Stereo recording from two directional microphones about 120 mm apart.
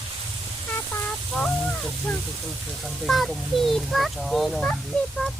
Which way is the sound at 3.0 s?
Centre (ahead or behind).